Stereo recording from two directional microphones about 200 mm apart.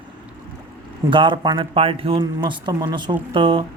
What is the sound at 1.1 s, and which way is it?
A man's voice, 25° right (ahead or behind).